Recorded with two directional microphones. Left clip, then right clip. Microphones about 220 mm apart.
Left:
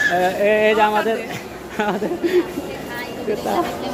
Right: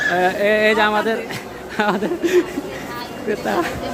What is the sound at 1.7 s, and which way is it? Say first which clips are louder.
Speech: right 2 dB; 20° right (ahead or behind).